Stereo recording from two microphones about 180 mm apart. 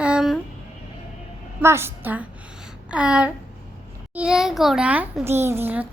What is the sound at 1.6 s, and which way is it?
Speech, 15° right (ahead or behind).